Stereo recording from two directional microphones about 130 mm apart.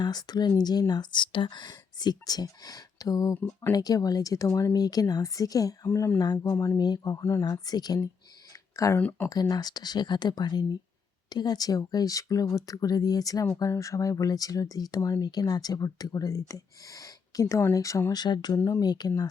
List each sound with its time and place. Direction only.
0.0 s speech: 30° left (ahead or behind); by 9.3 s 15° left (ahead or behind)
9.3 s speech: 30° left (ahead or behind)